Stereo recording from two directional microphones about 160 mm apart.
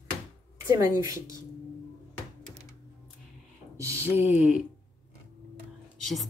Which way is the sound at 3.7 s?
20° right (ahead or behind).